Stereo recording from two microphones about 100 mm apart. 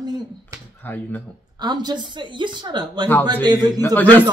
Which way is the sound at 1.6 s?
45° right (ahead or behind).